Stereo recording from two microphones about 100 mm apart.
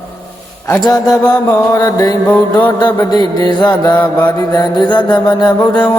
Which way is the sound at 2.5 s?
50° left (ahead or behind).